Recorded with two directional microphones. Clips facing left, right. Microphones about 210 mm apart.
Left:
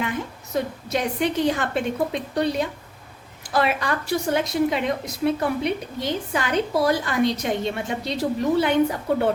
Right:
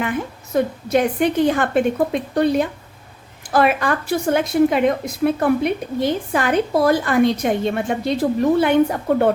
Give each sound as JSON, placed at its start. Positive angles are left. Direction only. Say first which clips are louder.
{"t": 0.5, "sound": "a woman's voice", "louder": "right 7 dB", "side_deg": -55}